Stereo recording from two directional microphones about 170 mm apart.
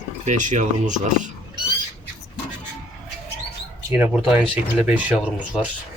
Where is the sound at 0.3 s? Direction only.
45° right (ahead or behind).